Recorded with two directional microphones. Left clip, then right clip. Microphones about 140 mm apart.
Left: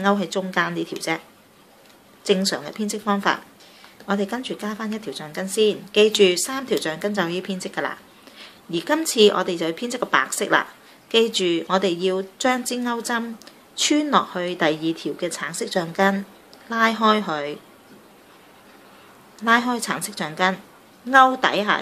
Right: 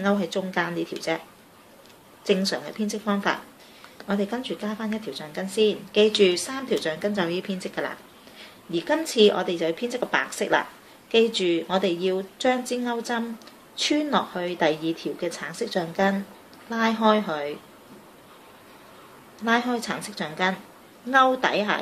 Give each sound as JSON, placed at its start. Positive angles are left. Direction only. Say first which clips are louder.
{"t": 0.0, "sound": "speech", "louder": "left 3 dB", "side_deg": 40}
{"t": 2.2, "sound": "speech", "louder": "left 3 dB", "side_deg": 40}
{"t": 19.4, "sound": "speech", "louder": "left 5 dB", "side_deg": 35}